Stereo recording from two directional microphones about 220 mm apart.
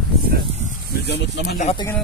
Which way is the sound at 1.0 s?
50° left (ahead or behind).